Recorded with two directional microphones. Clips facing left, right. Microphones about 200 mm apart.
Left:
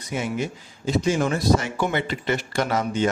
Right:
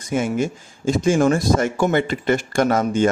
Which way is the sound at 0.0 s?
50° right (ahead or behind).